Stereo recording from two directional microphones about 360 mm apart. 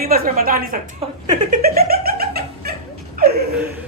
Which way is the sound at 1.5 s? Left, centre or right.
Right.